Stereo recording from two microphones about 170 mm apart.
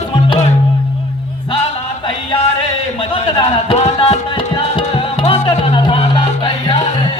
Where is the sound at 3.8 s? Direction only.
40° left (ahead or behind).